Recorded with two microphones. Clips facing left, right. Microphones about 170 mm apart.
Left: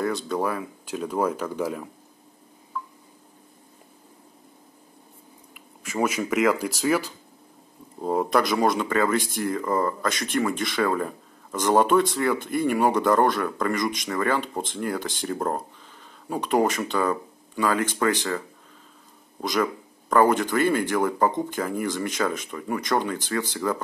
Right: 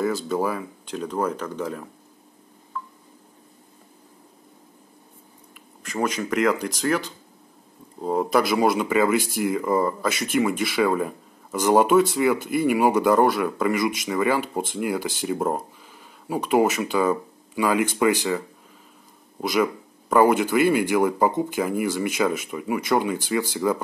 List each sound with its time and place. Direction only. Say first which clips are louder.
0.0 s speech: right 2 dB; centre (ahead or behind)
5.8 s speech: even; 5° left (ahead or behind); by 18.4 s 10° right (ahead or behind)
19.4 s speech: right 3 dB; 10° right (ahead or behind)